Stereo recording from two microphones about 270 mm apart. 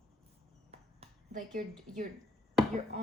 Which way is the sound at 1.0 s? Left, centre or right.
Right.